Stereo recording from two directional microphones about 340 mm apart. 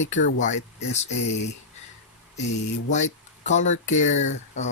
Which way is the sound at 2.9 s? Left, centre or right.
Left.